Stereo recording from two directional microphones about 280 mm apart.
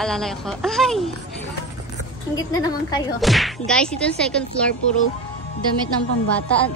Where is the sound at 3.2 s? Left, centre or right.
Centre.